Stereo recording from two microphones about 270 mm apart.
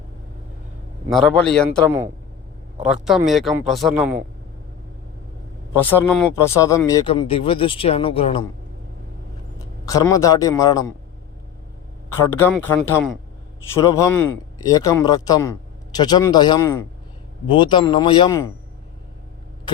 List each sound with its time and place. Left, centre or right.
1.1 s speech: centre
5.8 s speech: centre
9.6 s a man's voice: centre
12.2 s a man's voice: centre